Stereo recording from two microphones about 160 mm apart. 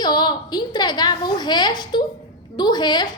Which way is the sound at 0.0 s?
25° left (ahead or behind).